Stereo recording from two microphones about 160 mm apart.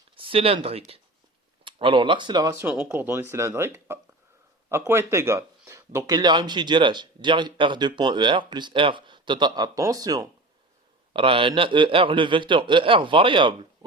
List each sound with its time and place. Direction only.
0.2 s speech: 35° right (ahead or behind)
2.6 s speech: 10° right (ahead or behind)
11.1 s a man's voice: 35° right (ahead or behind)